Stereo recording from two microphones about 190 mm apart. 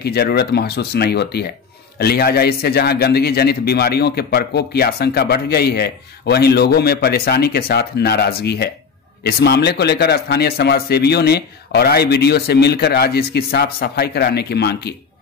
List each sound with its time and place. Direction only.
0.0 s a man's voice: 55° left (ahead or behind)